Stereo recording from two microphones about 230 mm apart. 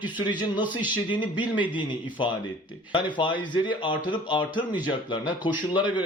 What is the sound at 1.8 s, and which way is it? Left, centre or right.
A man's voice, centre.